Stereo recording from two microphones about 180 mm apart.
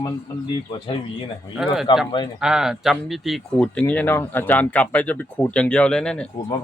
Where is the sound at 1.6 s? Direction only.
5° right (ahead or behind).